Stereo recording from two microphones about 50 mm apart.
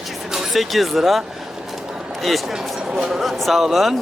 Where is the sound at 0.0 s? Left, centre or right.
Centre.